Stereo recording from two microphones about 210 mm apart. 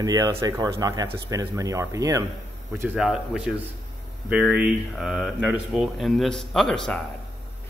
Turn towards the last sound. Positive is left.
turn(degrees=5)  # may be behind; listen again after turning